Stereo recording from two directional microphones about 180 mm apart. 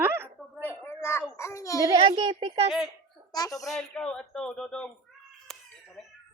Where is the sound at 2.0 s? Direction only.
25° right (ahead or behind).